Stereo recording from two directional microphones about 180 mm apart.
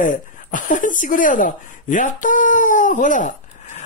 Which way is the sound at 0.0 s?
45° left (ahead or behind).